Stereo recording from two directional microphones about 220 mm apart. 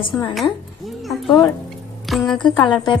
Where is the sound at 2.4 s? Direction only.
20° left (ahead or behind).